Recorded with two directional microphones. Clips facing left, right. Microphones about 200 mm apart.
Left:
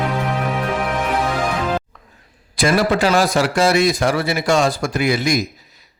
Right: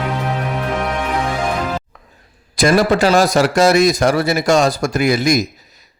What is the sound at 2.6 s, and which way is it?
Speech, 40° right (ahead or behind).